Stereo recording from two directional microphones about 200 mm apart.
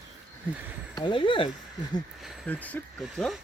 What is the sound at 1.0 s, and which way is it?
Speech, 25° left (ahead or behind).